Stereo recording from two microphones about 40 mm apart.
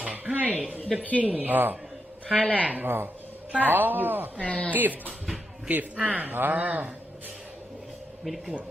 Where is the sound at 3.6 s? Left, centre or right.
Right.